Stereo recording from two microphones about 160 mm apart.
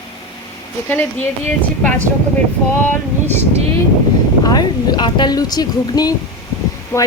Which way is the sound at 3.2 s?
15° left (ahead or behind).